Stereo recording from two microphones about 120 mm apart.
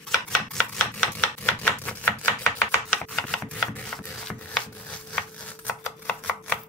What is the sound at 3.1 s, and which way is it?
Chopping, 5° left (ahead or behind).